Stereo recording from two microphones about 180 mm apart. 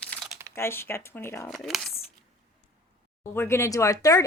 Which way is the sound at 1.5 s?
Centre (ahead or behind).